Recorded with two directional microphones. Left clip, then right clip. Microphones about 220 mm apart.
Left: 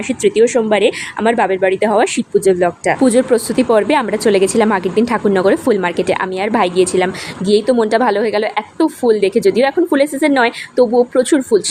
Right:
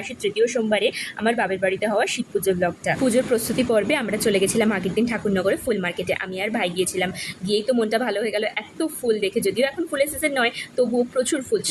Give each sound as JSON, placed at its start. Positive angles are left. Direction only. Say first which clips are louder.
{"t": 0.1, "sound": "a woman's voice", "louder": "left 10 dB", "side_deg": 20}